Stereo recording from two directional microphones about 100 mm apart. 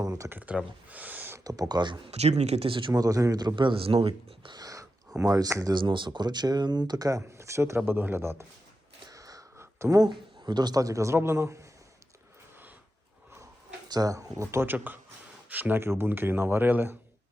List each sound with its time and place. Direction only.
0.0 s speech: 35° right (ahead or behind)
0.3 s speech: 15° right (ahead or behind)
1.5 s speech: 40° right (ahead or behind)
2.0 s speech: 90° right; by 2.9 s 60° right (ahead or behind)
2.9 s speech: 35° right (ahead or behind); by 4.1 s 70° right (ahead or behind)
4.4 s a sound: 40° right (ahead or behind)
5.3 s speech: 30° right (ahead or behind)
5.7 s speech: 55° right (ahead or behind)
7.2 s speech: 30° right (ahead or behind)
9.0 s a sound: 35° right (ahead or behind)
10.0 s speech: 45° right (ahead or behind); by 11.6 s 25° right (ahead or behind)
13.8 s speech: 40° right (ahead or behind); by 17.0 s 20° right (ahead or behind)